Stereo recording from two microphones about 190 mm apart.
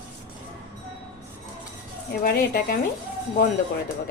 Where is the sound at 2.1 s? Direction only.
50° left (ahead or behind).